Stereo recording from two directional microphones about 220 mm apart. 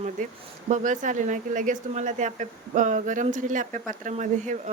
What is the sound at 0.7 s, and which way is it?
Speech, 35° right (ahead or behind).